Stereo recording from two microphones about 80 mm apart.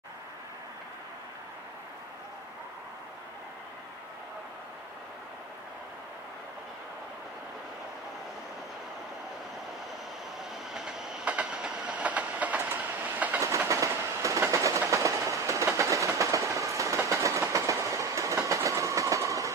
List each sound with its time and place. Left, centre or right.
10.7 s train: centre; by 13.4 s right
13.7 s train: right